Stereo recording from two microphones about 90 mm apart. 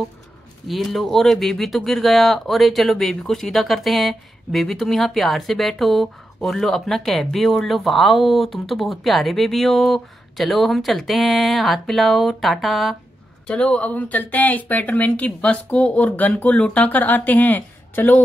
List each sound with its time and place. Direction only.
0.7 s speech: centre (ahead or behind); by 18.2 s 20° left (ahead or behind)